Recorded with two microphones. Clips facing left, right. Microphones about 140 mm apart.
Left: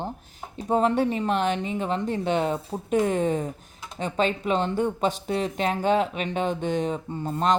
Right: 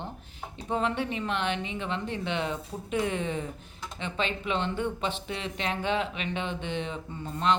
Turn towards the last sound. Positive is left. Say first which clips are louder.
# left 4 dB
turn(degrees=40)  # may be behind; listen again after turning